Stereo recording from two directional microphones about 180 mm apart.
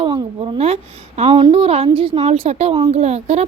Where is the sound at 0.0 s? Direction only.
25° right (ahead or behind).